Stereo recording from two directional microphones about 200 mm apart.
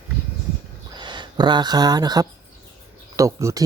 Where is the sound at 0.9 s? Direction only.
20° right (ahead or behind).